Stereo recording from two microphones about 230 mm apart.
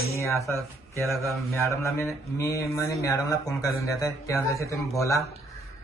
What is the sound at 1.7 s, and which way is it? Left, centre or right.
Speech, centre.